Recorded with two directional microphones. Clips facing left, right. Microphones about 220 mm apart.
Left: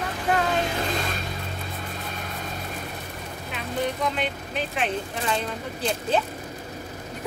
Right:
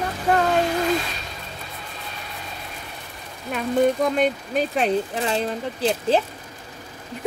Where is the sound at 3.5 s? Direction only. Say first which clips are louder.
Right 9 dB; 45° right (ahead or behind).